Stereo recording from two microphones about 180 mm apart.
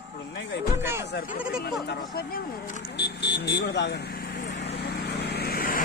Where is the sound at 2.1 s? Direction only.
55° left (ahead or behind).